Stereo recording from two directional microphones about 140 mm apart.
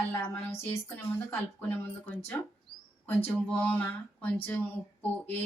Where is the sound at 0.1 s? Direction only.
15° left (ahead or behind).